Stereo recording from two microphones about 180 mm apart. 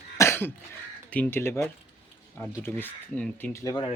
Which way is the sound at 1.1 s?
10° left (ahead or behind).